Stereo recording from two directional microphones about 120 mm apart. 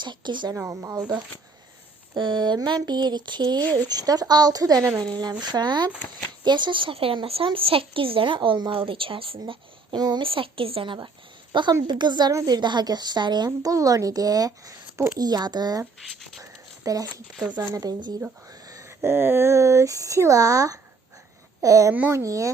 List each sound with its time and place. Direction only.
0.0 s a woman's voice: 40° right (ahead or behind)
0.7 s speech: 25° right (ahead or behind)
2.1 s a woman's voice: 40° right (ahead or behind)
9.5 s speech: 35° right (ahead or behind)
10.2 s a woman's voice: 45° right (ahead or behind)
16.0 s speech: centre (ahead or behind)
16.4 s a sound: 30° right (ahead or behind)
17.7 s a woman's voice: 35° right (ahead or behind)
21.9 s speech: 15° right (ahead or behind)
22.2 s speech: 25° right (ahead or behind)